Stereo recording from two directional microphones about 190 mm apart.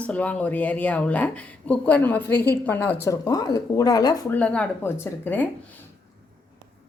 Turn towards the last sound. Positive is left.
turn(degrees=10)  # may be behind; listen again after turning